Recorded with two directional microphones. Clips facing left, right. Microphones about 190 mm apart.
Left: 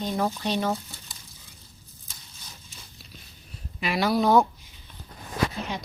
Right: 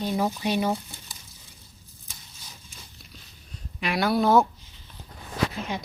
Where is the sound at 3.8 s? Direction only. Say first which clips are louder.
Even; centre (ahead or behind).